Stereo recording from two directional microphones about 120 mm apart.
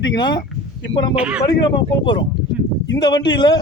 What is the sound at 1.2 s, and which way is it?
Speech, 10° right (ahead or behind).